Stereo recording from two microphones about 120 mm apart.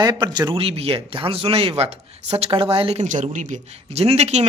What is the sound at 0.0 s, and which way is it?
Speech, 35° right (ahead or behind).